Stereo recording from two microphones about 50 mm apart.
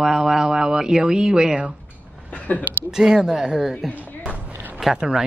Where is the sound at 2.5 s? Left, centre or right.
Left.